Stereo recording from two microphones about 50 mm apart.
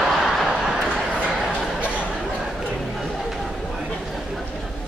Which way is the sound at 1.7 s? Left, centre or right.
Right.